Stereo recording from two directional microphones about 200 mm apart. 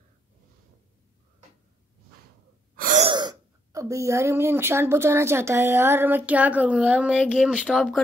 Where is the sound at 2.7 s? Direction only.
45° right (ahead or behind).